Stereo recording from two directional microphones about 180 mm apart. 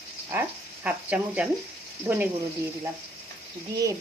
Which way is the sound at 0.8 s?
10° right (ahead or behind).